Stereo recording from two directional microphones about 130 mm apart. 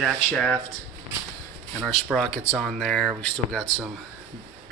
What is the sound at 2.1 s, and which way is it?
Speech, 5° left (ahead or behind).